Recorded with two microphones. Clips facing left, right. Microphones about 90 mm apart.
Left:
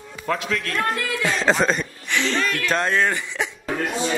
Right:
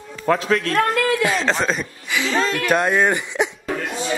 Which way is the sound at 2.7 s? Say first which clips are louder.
Right 3 dB; 10° right (ahead or behind).